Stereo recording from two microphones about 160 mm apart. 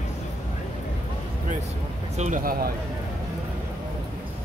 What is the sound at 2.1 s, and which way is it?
Speech, 50° right (ahead or behind).